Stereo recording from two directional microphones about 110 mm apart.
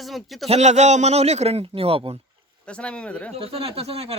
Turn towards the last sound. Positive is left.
turn(degrees=-65)  # may be behind; listen again after turning